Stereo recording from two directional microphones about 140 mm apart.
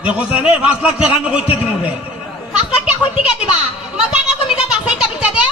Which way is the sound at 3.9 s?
10° right (ahead or behind).